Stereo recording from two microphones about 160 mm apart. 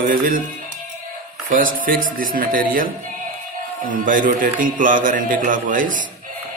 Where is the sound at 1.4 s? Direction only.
60° right (ahead or behind).